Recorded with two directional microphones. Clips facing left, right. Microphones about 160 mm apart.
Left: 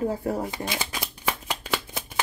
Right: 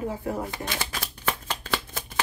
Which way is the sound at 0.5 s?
15° left (ahead or behind).